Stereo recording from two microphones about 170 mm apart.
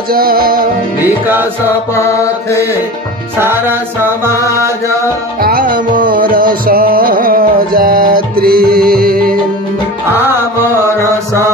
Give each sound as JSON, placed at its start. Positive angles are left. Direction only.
{"t": 0.1, "sound": "music", "side_deg": -60}
{"t": 1.0, "sound": "music", "side_deg": -10}
{"t": 2.0, "sound": "mantra", "side_deg": 15}
{"t": 3.3, "sound": "music", "side_deg": -15}
{"t": 5.4, "sound": "music", "side_deg": -60}